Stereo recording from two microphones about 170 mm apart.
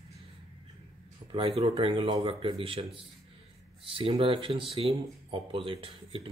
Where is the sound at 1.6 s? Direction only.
35° right (ahead or behind).